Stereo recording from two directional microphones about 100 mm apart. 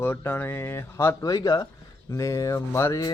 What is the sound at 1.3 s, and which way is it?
Speech, 40° left (ahead or behind).